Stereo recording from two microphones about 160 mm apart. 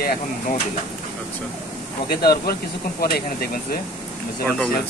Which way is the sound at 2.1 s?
75° left (ahead or behind).